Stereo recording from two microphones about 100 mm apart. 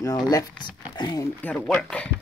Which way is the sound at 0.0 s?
35° left (ahead or behind).